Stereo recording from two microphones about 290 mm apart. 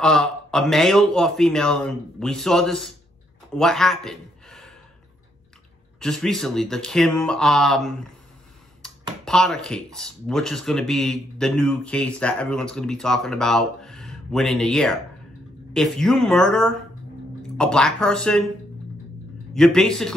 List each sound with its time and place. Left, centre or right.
0.0 s speech: centre
5.9 s speech: centre
8.8 s computer keyboard: centre
9.2 s speech: centre
19.5 s speech: centre